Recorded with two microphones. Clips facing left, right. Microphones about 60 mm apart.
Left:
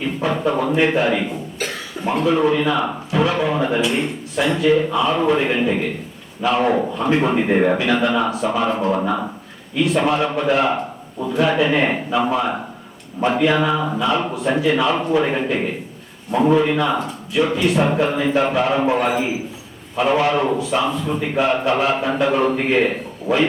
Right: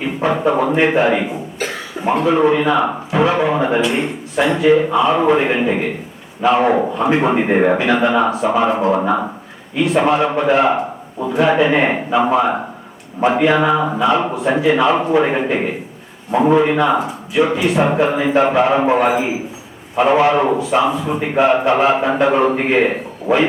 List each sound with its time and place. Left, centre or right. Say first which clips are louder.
0.0 s a man's voice: right 3 dB; right
1.5 s cough: right 3 dB; centre
2.0 s a man's voice: right 3 dB; centre
9.7 s a man's voice: right 3 dB; centre